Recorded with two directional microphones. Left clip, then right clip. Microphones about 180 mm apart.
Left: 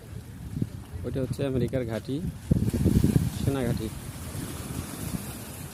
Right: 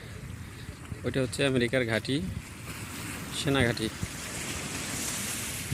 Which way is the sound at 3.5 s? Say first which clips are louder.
Right 4 dB; centre (ahead or behind).